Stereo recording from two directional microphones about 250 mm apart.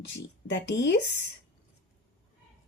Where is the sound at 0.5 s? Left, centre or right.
Left.